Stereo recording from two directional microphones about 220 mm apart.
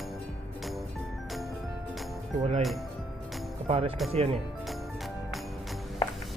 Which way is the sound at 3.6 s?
25° right (ahead or behind).